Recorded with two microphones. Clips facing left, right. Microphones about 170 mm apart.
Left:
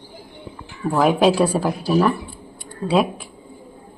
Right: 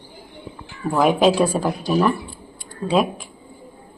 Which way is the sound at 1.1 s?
5° left (ahead or behind).